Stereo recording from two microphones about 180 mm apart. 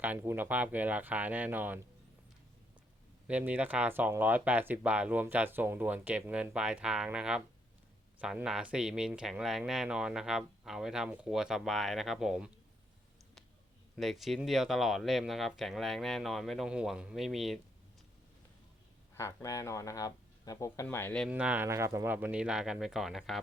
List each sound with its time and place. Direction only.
0.0 s speech: 10° right (ahead or behind)
3.2 s speech: 10° right (ahead or behind)
13.9 s speech: centre (ahead or behind)
19.1 s speech: 15° left (ahead or behind)
21.2 s speech: 5° right (ahead or behind)